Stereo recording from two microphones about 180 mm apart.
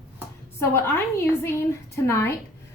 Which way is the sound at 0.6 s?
15° left (ahead or behind).